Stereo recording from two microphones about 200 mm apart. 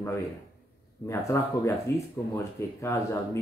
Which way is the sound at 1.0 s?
15° left (ahead or behind).